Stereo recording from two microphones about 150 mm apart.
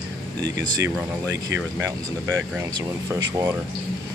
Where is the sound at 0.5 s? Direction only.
15° right (ahead or behind).